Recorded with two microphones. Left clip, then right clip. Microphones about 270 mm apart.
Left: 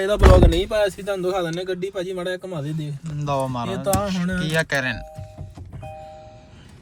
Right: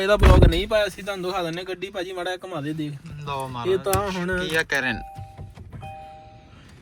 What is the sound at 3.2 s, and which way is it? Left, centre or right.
Speech, centre.